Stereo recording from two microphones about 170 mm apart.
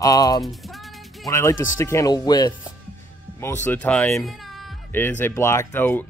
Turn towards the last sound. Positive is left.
turn(degrees=10)  # may be behind; listen again after turning